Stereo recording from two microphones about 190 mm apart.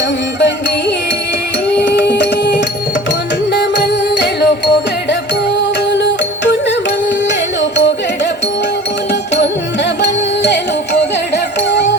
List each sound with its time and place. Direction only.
0.3 s music: 65° left (ahead or behind)
4.2 s music: 65° left (ahead or behind)
6.0 s music: 65° left (ahead or behind)
10.0 s music: 65° left (ahead or behind)